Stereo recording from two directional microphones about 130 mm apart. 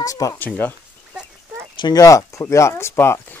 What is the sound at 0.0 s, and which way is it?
Speech, 25° left (ahead or behind).